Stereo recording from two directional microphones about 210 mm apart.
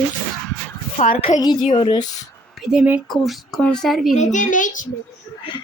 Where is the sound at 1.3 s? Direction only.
20° left (ahead or behind).